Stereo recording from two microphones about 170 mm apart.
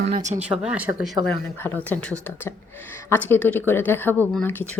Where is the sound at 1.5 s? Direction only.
10° left (ahead or behind).